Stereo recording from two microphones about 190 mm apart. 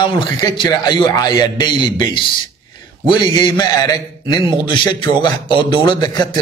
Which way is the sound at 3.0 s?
25° left (ahead or behind).